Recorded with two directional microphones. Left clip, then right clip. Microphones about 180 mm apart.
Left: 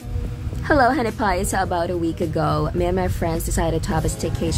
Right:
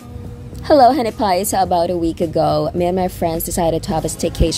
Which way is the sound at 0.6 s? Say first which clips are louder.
Right 6 dB; 15° right (ahead or behind).